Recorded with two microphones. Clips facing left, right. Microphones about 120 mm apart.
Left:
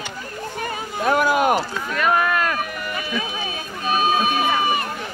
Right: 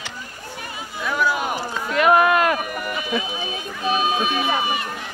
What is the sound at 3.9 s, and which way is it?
Speech, 45° left (ahead or behind).